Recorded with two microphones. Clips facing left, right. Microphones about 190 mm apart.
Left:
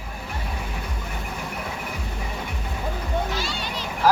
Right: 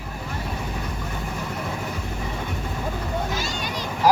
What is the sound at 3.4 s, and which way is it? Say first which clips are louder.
Children playing: right 1 dB; 45° right (ahead or behind).